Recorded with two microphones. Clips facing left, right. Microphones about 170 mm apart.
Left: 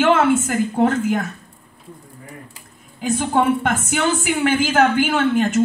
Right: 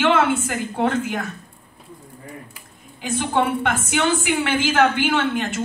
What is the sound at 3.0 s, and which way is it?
Speech, 40° left (ahead or behind).